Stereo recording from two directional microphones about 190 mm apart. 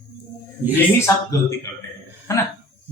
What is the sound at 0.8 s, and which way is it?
Speech, 15° left (ahead or behind).